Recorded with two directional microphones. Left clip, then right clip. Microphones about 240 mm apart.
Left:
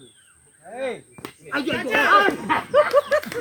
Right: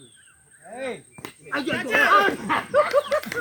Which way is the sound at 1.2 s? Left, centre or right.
Centre.